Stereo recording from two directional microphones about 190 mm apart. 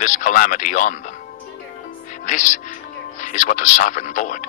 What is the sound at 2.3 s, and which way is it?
Speech, 40° left (ahead or behind).